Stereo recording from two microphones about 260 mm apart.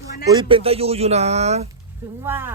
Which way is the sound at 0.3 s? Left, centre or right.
Centre.